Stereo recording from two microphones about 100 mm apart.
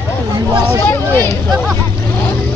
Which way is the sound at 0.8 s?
20° left (ahead or behind).